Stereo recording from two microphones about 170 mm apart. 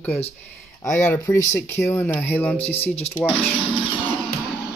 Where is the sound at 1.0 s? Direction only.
15° left (ahead or behind).